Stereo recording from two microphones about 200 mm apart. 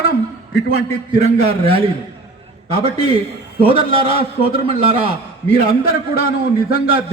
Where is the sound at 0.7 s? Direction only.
30° right (ahead or behind).